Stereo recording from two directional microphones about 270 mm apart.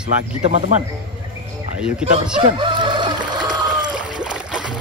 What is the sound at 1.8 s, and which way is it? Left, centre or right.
Speech, centre.